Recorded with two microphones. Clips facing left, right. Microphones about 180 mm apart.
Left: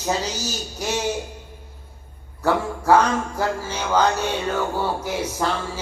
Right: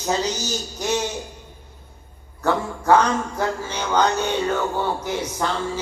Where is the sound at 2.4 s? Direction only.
10° left (ahead or behind).